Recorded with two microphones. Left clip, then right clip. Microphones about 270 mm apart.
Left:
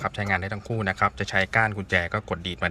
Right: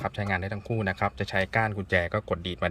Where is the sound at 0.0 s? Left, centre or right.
Centre.